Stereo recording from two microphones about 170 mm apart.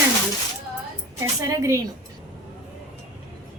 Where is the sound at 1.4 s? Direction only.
15° right (ahead or behind).